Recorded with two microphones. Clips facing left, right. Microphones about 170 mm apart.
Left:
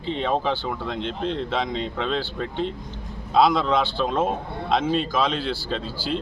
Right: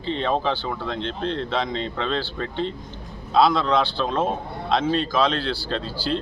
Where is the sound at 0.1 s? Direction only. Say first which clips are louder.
Right 1 dB; 5° left (ahead or behind).